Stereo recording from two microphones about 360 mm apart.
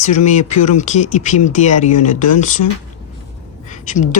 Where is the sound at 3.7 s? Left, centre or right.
Left.